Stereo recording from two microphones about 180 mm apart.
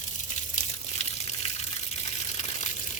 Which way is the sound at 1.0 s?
35° left (ahead or behind).